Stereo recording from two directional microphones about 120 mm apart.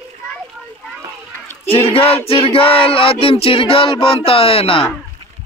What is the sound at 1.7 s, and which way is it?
Speech, 50° left (ahead or behind).